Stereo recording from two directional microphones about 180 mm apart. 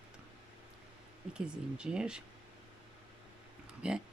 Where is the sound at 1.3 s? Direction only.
5° right (ahead or behind).